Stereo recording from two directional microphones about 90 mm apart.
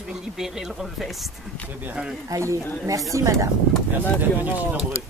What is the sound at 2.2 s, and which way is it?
A woman's voice, 35° right (ahead or behind).